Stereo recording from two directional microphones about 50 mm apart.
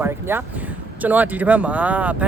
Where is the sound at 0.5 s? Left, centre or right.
Right.